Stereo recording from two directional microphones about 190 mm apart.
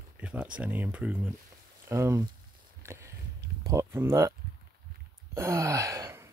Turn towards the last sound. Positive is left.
turn(degrees=-15)  # may be behind; listen again after turning